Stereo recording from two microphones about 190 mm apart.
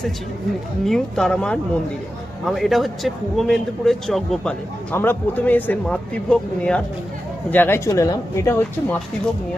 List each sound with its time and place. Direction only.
0.9 s a man's voice: centre (ahead or behind)